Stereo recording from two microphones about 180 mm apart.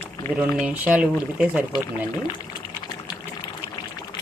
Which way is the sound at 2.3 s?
25° left (ahead or behind).